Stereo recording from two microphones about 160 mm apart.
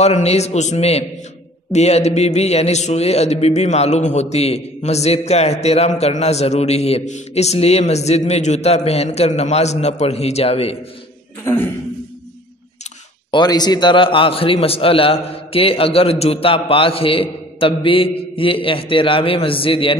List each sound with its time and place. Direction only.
0.0 s a man's voice: 40° left (ahead or behind)
11.4 s speech: 15° left (ahead or behind)
13.3 s a man's voice: 25° left (ahead or behind)